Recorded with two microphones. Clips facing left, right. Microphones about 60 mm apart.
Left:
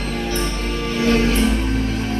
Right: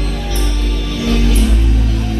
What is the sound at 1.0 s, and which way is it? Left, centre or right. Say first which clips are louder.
Music: even; left.